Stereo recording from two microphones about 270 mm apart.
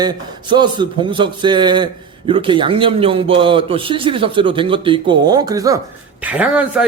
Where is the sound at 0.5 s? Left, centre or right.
Centre.